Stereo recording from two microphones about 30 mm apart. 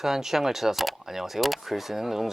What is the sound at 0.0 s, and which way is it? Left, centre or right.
Speech, centre.